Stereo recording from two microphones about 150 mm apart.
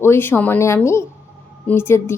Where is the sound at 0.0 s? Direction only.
15° left (ahead or behind).